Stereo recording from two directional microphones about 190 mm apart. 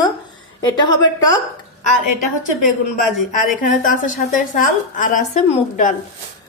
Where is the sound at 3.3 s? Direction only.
45° left (ahead or behind).